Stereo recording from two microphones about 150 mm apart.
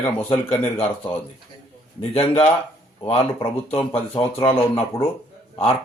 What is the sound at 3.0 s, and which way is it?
Speech, 40° left (ahead or behind).